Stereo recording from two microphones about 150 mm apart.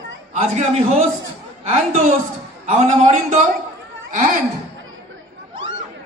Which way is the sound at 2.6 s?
50° right (ahead or behind).